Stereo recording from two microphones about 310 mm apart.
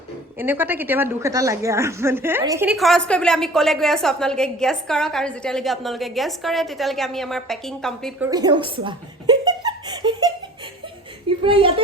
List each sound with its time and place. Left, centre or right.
0.3 s a woman's voice: centre
8.3 s speech: centre
11.4 s a woman's voice: centre